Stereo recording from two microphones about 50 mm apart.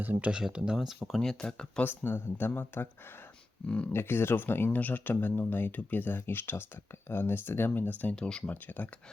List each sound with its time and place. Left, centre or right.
0.0 s speech: right
0.3 s speech: centre
1.0 s speech: centre
1.8 s speech: left
3.9 s speech: left
4.8 s speech: left
8.1 s speech: centre
8.4 s speech: left